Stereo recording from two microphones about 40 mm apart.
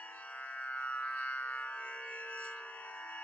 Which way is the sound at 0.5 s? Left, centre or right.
Left.